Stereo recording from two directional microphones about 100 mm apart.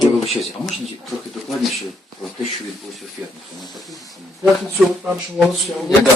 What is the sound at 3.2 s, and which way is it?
Speech, 15° right (ahead or behind).